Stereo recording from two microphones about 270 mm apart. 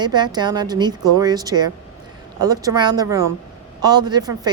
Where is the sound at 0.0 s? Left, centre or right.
Centre.